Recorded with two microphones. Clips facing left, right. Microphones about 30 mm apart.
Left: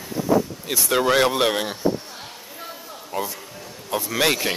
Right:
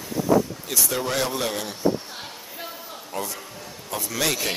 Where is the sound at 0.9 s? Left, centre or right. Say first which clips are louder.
Left 9 dB; left.